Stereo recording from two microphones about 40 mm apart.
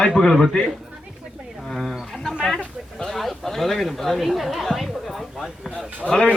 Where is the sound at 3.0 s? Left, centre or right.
Centre.